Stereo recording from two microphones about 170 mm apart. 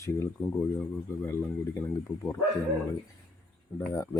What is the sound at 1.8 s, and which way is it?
Speech, 10° left (ahead or behind).